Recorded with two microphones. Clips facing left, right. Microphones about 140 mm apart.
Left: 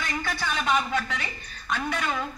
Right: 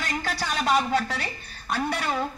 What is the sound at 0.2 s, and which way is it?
A woman's voice, 40° right (ahead or behind).